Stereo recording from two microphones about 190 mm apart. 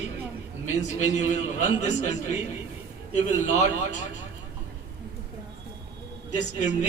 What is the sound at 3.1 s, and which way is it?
Speech, 40° left (ahead or behind).